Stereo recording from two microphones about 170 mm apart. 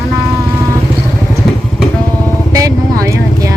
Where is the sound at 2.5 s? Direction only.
20° right (ahead or behind).